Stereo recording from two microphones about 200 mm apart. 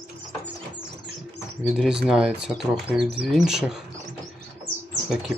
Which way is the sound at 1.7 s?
Centre (ahead or behind).